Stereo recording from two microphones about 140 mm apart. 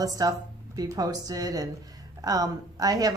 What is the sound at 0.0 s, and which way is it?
Speech, 25° right (ahead or behind).